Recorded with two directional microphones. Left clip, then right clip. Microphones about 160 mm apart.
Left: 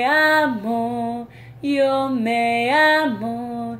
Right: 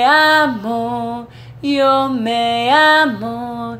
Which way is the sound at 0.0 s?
20° left (ahead or behind).